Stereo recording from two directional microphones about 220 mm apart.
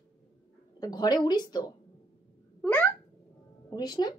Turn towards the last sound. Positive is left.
turn(degrees=20)  # may be behind; listen again after turning